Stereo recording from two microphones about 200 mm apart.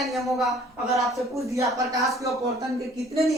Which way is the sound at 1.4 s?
15° right (ahead or behind).